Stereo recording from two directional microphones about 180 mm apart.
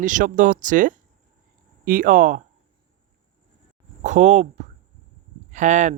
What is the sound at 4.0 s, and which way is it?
Speech, 40° right (ahead or behind).